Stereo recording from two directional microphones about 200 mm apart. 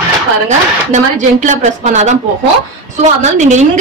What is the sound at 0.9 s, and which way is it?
A woman's voice, 35° right (ahead or behind).